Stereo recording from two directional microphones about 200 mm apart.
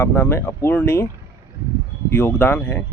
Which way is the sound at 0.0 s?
10° left (ahead or behind).